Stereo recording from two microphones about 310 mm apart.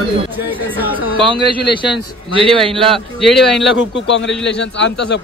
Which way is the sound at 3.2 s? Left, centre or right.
Centre.